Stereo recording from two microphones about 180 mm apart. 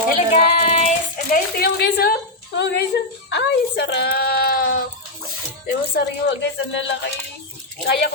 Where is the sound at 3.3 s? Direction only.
70° left (ahead or behind); by 4.8 s 55° left (ahead or behind).